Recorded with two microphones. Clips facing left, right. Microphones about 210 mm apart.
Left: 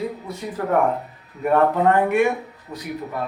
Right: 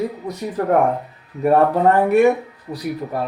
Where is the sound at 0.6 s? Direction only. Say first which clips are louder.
Right 3 dB; 40° right (ahead or behind).